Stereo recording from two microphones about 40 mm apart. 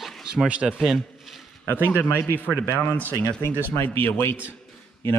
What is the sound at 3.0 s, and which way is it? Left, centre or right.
Speech, left.